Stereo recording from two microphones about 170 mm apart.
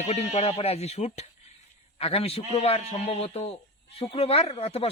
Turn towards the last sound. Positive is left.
turn(degrees=35)  # may be behind; listen again after turning